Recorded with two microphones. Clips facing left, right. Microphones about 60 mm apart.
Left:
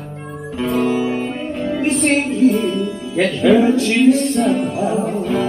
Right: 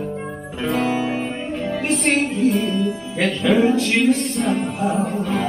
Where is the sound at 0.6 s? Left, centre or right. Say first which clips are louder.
Left 3 dB; centre.